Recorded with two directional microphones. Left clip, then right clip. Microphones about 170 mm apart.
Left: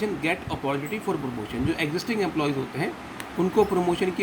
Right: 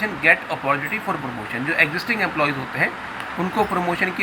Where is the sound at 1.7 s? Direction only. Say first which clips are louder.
Right 11 dB; 35° left (ahead or behind).